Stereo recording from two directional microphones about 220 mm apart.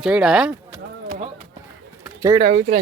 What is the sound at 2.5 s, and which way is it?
Speech, 35° right (ahead or behind).